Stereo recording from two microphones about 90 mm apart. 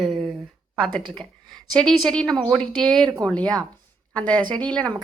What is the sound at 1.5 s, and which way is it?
A woman's voice, 5° left (ahead or behind).